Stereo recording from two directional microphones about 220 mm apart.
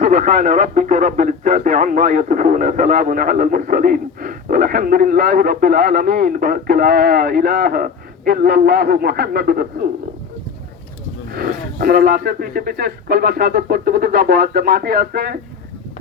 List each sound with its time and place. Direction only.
0.0 s speech: 35° right (ahead or behind)
11.3 s speech: 40° right (ahead or behind)